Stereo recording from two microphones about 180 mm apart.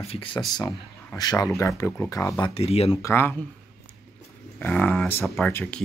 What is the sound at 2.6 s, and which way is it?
Speech, 35° left (ahead or behind).